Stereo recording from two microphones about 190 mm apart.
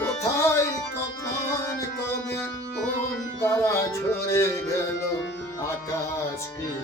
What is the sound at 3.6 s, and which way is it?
Music, 15° left (ahead or behind).